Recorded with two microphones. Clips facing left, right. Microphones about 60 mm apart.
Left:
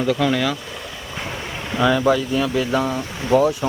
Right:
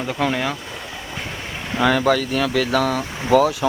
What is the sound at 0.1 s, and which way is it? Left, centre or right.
Speech, right.